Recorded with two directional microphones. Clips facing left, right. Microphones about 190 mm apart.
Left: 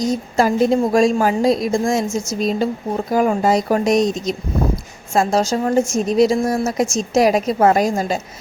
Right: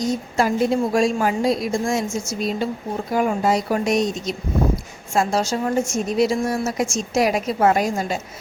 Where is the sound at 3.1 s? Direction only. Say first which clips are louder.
Left 3 dB; 40° left (ahead or behind).